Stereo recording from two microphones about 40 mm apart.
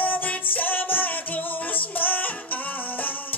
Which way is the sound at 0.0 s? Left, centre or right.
Left.